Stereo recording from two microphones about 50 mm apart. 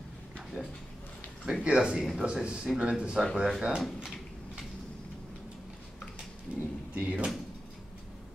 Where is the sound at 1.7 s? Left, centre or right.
Centre.